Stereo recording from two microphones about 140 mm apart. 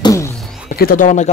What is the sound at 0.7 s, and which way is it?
Speech, 90° left.